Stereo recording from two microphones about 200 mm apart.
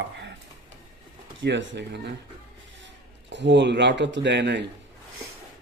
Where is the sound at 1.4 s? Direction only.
60° right (ahead or behind).